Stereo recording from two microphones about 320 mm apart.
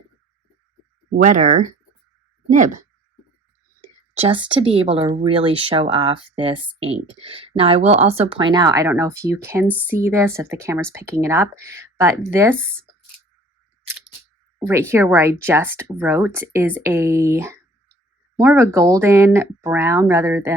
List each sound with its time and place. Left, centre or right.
1.1 s speech: right; by 13.0 s centre
13.8 s a sound: centre
14.6 s speech: centre